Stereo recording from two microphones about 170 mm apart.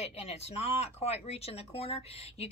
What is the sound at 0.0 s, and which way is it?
Speech, 40° left (ahead or behind).